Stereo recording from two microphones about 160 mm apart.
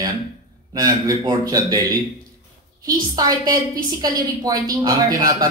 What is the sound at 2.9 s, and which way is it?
Speech, 25° right (ahead or behind).